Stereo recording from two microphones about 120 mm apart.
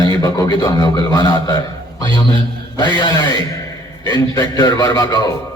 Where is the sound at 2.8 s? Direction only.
40° left (ahead or behind).